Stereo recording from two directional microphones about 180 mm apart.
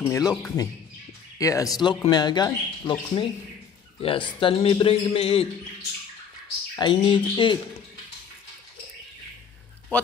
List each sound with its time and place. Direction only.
0.0 s a man's voice: 20° left (ahead or behind)
6.7 s speech: 25° left (ahead or behind)